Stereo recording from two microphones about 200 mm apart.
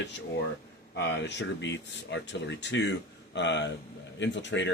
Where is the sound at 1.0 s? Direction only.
60° left (ahead or behind).